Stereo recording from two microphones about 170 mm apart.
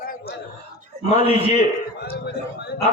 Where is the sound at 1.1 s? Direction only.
35° left (ahead or behind).